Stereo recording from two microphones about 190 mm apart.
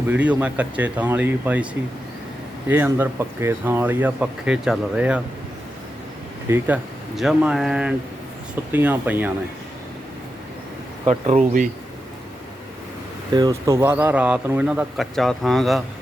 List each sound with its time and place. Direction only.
0.1 s speech: 5° right (ahead or behind)
2.6 s speech: 10° right (ahead or behind)
6.5 s speech: 15° right (ahead or behind)
7.2 s speech: centre (ahead or behind)
11.0 s speech: 35° right (ahead or behind)
13.3 s speech: 20° right (ahead or behind); by 15.8 s centre (ahead or behind)